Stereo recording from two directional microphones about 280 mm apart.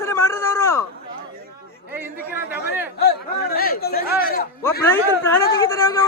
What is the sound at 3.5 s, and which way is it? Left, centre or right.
Speech, left.